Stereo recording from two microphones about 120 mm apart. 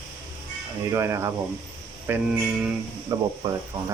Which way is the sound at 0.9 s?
25° right (ahead or behind).